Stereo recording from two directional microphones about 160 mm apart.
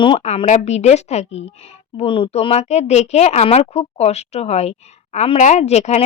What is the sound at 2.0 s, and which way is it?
A woman's voice, 35° left (ahead or behind).